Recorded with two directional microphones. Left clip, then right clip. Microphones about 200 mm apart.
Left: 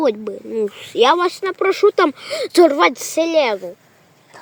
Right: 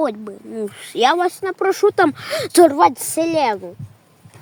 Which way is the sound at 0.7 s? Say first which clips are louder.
Left 2 dB; 55° right (ahead or behind).